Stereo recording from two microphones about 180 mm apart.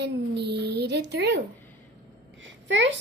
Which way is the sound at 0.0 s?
65° right (ahead or behind).